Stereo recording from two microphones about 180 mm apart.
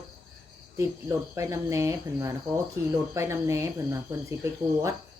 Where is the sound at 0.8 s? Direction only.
15° right (ahead or behind).